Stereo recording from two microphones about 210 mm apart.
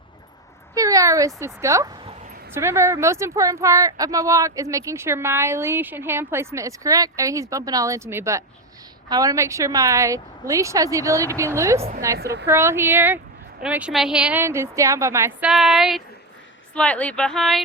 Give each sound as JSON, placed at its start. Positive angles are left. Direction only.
{"t": 0.7, "sound": "a woman's voice", "side_deg": -15}
{"t": 12.2, "sound": "a woman's voice", "side_deg": -50}
{"t": 12.5, "sound": "a woman's voice", "side_deg": -10}
{"t": 15.4, "sound": "speech", "side_deg": 0}